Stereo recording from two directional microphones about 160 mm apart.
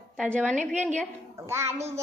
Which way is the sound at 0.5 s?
50° right (ahead or behind).